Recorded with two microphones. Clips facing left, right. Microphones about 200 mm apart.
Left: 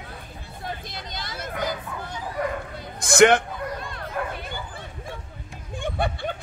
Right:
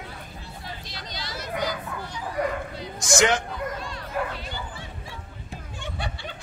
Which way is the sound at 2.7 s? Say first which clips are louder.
Left 8 dB; 60° left (ahead or behind).